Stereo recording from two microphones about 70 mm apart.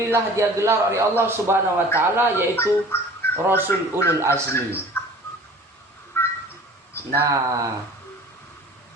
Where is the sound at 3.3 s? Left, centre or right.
Right.